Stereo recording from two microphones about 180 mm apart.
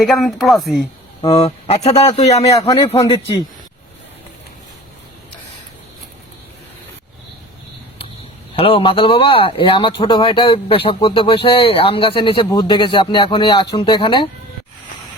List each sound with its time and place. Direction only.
0.0 s speech: centre (ahead or behind)
1.2 s speech: 35° left (ahead or behind)
2.5 s speech: 20° left (ahead or behind)
8.5 s speech: 30° left (ahead or behind)